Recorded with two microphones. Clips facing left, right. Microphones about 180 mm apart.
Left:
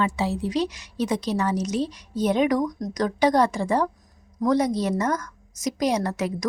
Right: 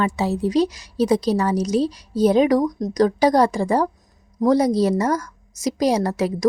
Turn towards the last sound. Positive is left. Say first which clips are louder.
# right 6 dB
turn(degrees=-35)  # may be behind; listen again after turning